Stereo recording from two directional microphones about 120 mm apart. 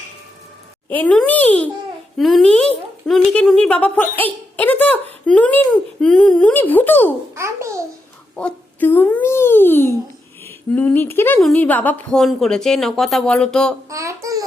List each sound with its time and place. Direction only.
0.9 s a child's voice: 10° left (ahead or behind)
2.1 s a child's voice: centre (ahead or behind); by 7.1 s 15° left (ahead or behind)
7.3 s a child's voice: 25° right (ahead or behind)
8.4 s a child's voice: 10° left (ahead or behind)
11.3 s a child's voice: 5° left (ahead or behind)
12.2 s speech: 5° left (ahead or behind)
13.9 s a child's voice: 25° right (ahead or behind)